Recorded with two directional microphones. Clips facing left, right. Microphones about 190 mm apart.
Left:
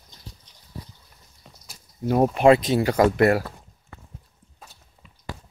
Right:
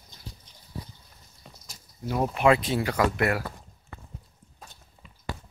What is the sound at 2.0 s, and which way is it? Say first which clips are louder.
Speech: left 6 dB; 40° left (ahead or behind).